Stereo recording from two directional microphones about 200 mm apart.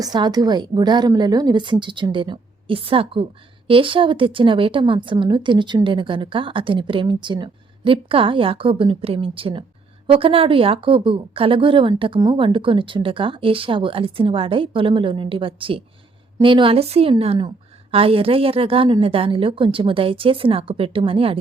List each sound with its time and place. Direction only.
0.0 s a woman's voice: 20° right (ahead or behind)